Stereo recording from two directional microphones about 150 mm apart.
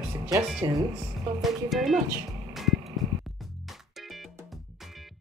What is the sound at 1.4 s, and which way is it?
Speech, centre (ahead or behind).